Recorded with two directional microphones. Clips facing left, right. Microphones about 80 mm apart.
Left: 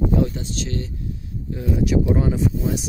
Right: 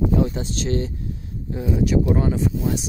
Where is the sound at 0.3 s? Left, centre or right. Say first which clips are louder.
Right 4 dB; right.